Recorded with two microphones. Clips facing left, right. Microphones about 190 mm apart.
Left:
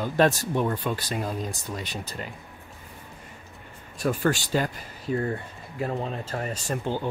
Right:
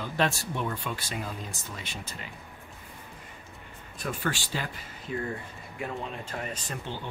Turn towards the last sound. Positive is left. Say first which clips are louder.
# left 7 dB
turn(degrees=40)  # may be behind; listen again after turning